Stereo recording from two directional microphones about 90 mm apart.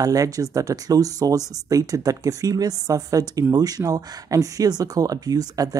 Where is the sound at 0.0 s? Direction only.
40° right (ahead or behind).